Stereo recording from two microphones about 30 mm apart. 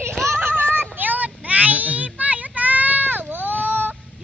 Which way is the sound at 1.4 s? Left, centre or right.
Right.